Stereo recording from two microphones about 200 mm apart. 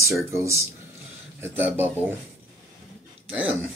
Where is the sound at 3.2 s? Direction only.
5° right (ahead or behind).